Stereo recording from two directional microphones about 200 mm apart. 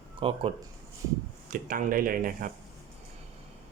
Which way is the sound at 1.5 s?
40° right (ahead or behind).